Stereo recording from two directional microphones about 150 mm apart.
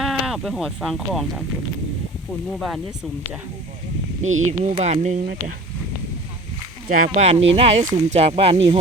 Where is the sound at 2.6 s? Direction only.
Centre (ahead or behind).